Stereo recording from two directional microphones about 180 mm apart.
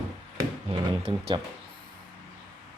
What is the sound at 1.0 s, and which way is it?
Speech, 25° right (ahead or behind).